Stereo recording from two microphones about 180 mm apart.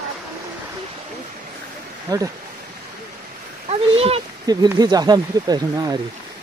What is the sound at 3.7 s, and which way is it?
Speech, 35° right (ahead or behind).